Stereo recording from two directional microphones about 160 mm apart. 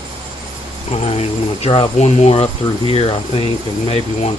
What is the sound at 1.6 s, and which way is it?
Speech, 30° left (ahead or behind).